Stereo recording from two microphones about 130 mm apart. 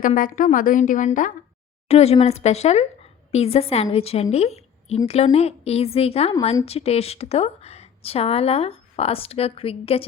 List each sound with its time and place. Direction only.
0.2 s a woman's voice: 90° left
1.9 s a woman's voice: 50° left (ahead or behind)